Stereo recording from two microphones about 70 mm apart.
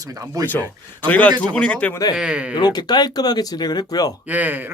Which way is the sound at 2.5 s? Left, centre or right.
Left.